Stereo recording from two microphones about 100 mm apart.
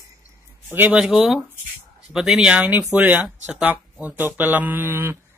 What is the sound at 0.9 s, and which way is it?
A man's voice, 5° right (ahead or behind).